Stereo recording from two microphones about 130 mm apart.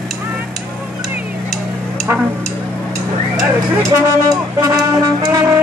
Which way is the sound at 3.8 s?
25° right (ahead or behind).